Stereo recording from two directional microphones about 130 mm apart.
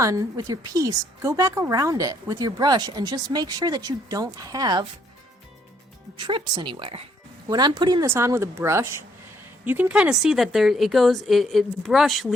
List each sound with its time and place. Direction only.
0.0 s speech: 25° right (ahead or behind)
6.1 s a woman's voice: 35° right (ahead or behind)
7.4 s a woman's voice: 30° right (ahead or behind)
8.0 s a woman's voice: 20° right (ahead or behind); by 12.3 s centre (ahead or behind)